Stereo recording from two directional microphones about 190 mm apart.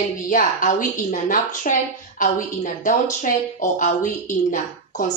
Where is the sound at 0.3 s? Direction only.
45° left (ahead or behind).